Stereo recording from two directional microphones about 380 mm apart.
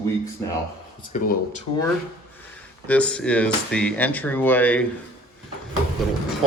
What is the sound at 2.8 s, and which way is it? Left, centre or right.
Speech, centre.